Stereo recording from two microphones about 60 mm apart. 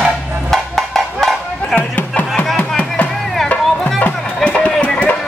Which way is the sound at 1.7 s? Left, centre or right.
Centre.